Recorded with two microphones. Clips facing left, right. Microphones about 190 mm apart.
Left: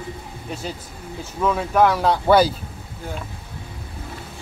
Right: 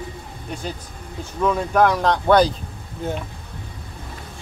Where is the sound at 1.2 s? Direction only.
5° left (ahead or behind).